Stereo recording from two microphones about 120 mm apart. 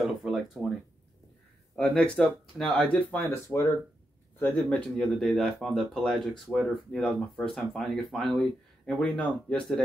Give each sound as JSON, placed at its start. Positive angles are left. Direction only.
{"t": 0.0, "sound": "a sound", "side_deg": 0}
{"t": 1.8, "sound": "speech", "side_deg": 10}
{"t": 3.1, "sound": "speech", "side_deg": 20}
{"t": 4.6, "sound": "speech", "side_deg": 5}